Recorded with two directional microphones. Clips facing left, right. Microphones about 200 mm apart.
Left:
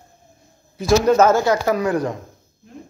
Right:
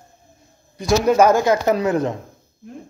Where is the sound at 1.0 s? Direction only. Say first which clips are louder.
Right 2 dB; 10° right (ahead or behind).